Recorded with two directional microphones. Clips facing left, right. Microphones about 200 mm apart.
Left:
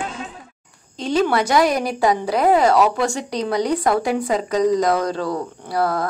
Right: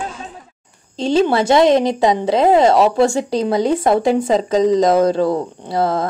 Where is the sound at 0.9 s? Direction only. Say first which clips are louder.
Right 4 dB; 25° right (ahead or behind).